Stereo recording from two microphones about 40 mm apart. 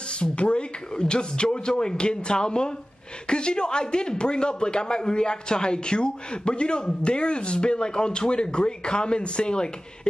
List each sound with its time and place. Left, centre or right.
0.1 s speech: left